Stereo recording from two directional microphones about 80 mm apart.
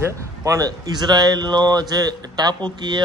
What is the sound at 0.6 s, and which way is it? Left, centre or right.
Speech, right.